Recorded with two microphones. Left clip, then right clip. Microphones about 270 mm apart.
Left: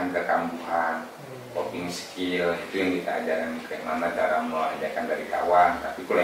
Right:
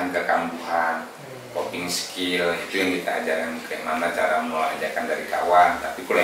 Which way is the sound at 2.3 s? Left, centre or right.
Centre.